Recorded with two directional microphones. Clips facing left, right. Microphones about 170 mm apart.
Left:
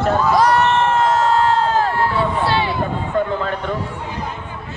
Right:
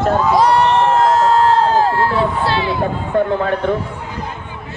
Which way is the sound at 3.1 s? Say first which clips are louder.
Right 5 dB; 55° right (ahead or behind).